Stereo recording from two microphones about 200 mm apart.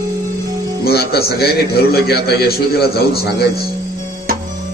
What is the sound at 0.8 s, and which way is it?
A man's voice, 50° left (ahead or behind).